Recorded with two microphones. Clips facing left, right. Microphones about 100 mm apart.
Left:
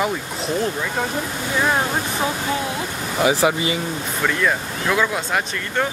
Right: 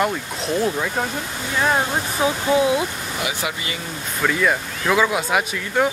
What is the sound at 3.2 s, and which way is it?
Speech, 30° left (ahead or behind).